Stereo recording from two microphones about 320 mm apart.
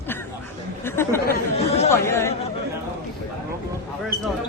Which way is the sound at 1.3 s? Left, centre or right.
Centre.